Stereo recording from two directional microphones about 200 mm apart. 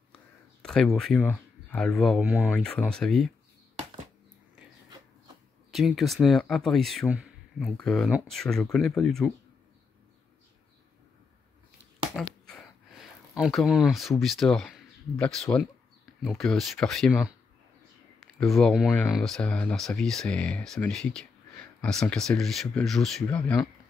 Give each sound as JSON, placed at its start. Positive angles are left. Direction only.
{"t": 0.6, "sound": "speech", "side_deg": 5}
{"t": 5.7, "sound": "speech", "side_deg": 0}
{"t": 12.2, "sound": "a sound", "side_deg": 5}
{"t": 13.4, "sound": "speech", "side_deg": 0}
{"t": 18.4, "sound": "speech", "side_deg": 0}